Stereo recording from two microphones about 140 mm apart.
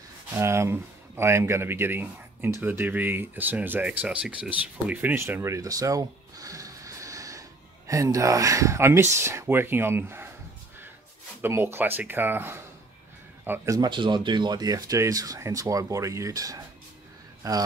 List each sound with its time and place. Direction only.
0.3 s speech: 20° right (ahead or behind)
11.4 s speech: 15° right (ahead or behind)
13.8 s a man's voice: 35° right (ahead or behind)